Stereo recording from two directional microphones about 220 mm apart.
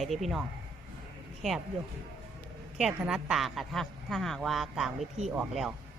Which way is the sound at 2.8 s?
5° right (ahead or behind).